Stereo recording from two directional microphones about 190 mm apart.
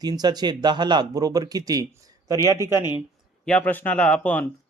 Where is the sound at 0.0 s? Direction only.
20° right (ahead or behind).